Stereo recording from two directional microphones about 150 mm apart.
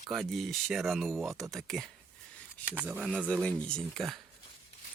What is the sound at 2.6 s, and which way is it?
Speech, 10° right (ahead or behind).